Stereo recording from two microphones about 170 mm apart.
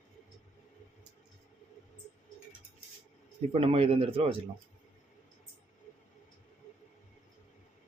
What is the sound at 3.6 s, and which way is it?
Speech, 35° right (ahead or behind).